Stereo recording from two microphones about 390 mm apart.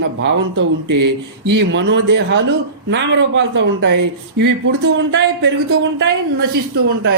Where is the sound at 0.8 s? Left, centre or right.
Right.